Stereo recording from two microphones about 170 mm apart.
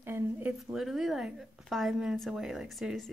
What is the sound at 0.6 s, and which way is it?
A woman's voice, centre (ahead or behind).